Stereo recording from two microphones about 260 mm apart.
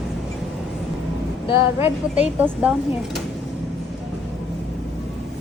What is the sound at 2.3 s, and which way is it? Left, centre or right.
Speech, centre.